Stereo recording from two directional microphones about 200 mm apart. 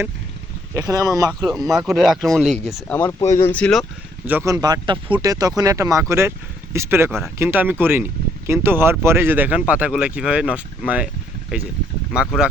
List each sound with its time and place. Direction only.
0.7 s speech: 15° right (ahead or behind)
1.3 s speech: centre (ahead or behind)
4.3 s speech: 10° right (ahead or behind)